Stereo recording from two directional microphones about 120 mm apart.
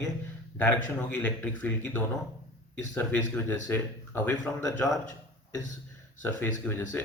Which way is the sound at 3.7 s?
15° left (ahead or behind).